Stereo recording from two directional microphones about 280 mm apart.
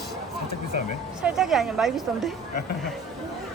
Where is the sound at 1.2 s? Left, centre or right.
Centre.